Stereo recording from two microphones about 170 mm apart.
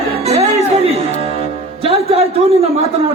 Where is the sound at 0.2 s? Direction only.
40° right (ahead or behind).